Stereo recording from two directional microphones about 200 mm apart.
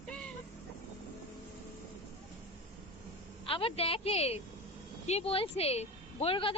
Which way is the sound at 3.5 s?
25° left (ahead or behind).